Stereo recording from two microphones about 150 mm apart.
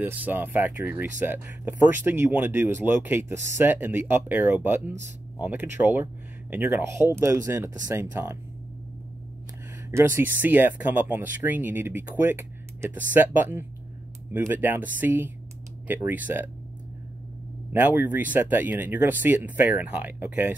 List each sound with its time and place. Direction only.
0.0 s speech: 10° right (ahead or behind)
9.8 s speech: 15° right (ahead or behind)
17.7 s speech: 10° right (ahead or behind)